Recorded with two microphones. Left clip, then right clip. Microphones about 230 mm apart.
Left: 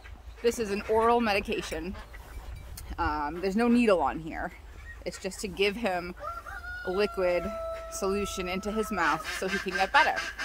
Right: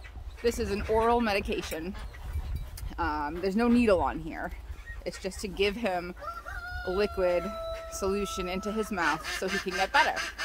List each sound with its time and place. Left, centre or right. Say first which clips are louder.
0.4 s speech: left 1 dB; centre
3.0 s speech: left 1 dB; centre
9.5 s speech: even; right
9.8 s speech: left 2 dB; centre
10.1 s speech: left 1 dB; right